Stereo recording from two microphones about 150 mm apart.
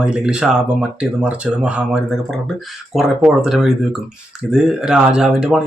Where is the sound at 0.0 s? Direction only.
5° right (ahead or behind).